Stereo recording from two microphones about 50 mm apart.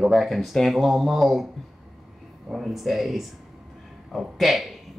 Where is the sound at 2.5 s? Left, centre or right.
Centre.